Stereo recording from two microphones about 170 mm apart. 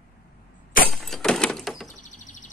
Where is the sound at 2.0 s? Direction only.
50° left (ahead or behind).